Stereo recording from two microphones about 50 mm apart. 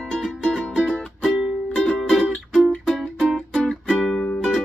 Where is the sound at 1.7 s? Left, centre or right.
Centre.